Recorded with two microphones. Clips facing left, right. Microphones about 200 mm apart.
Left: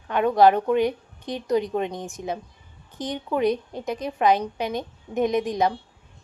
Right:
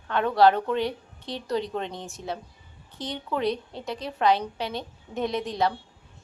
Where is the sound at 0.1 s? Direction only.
15° left (ahead or behind).